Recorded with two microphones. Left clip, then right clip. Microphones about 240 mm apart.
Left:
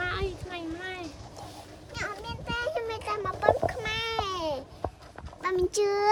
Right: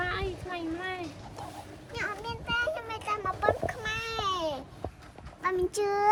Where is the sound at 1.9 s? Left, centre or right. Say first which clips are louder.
Right 1 dB; left.